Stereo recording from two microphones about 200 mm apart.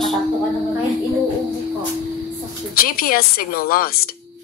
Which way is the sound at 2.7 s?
45° left (ahead or behind).